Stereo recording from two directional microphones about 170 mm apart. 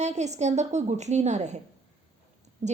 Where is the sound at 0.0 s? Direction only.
45° right (ahead or behind).